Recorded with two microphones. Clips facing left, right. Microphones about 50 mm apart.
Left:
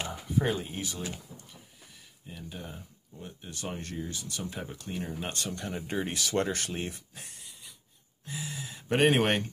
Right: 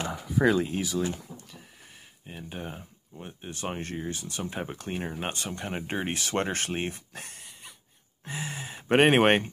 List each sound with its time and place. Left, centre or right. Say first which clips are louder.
0.5 s speech: right 7 dB; right
2.2 s speech: right 4 dB; right
5.3 s speech: right 1 dB; right
5.7 s speech: right 3 dB; right
7.2 s a sound: right 5 dB; right
8.3 s speech: right 3 dB; right